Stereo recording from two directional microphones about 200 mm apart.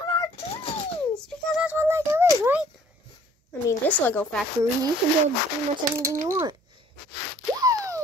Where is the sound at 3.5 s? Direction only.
10° left (ahead or behind).